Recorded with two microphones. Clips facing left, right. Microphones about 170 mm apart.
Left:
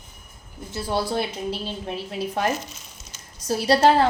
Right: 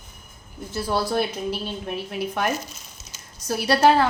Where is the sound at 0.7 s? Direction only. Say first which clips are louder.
Right 1 dB; 25° left (ahead or behind).